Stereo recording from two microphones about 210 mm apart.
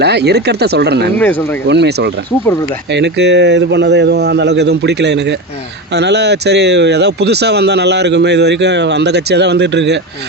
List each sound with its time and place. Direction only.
0.0 s speech: 50° right (ahead or behind)
1.2 s speech: 10° left (ahead or behind)
1.6 s a man's voice: 55° right (ahead or behind)